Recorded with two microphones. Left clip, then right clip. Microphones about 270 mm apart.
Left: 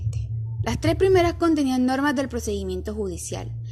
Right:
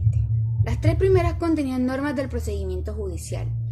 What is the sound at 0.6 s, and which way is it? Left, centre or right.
A woman's voice, left.